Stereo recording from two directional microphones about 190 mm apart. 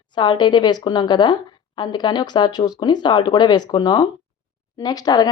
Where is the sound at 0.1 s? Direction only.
25° left (ahead or behind).